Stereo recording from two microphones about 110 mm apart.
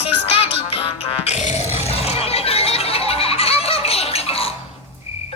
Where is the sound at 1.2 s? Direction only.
85° left; by 4.5 s 60° left (ahead or behind).